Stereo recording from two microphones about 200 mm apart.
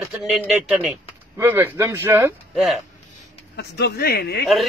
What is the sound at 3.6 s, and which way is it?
Speech, 55° left (ahead or behind).